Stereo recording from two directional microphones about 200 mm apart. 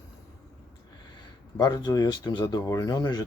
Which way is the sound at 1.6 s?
20° left (ahead or behind).